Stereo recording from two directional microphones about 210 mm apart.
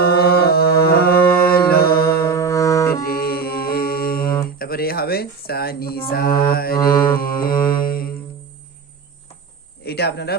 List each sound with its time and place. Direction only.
0.0 s music: 50° left (ahead or behind)
2.2 s music: 15° left (ahead or behind)
3.1 s music: 45° left (ahead or behind)
4.4 s speech: 45° left (ahead or behind)
6.1 s mantra: 45° left (ahead or behind)
6.7 s mantra: 15° left (ahead or behind)
7.2 s mantra: 45° left (ahead or behind)
9.8 s a sound: 50° left (ahead or behind)